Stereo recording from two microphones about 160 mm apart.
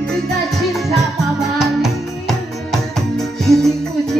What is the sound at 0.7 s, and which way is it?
Music, centre (ahead or behind).